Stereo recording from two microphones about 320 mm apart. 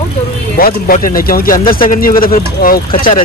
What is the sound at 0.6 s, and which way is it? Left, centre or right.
Speech, left.